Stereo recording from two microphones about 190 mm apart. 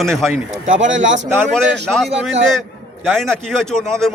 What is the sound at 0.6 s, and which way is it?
Speech, 80° right.